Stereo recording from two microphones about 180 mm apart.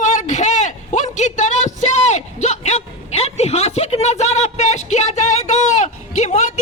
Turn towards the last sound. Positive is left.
turn(degrees=40)  # may be behind; listen again after turning